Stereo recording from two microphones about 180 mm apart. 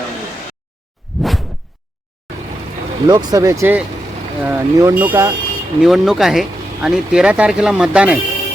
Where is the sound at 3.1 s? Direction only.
20° right (ahead or behind).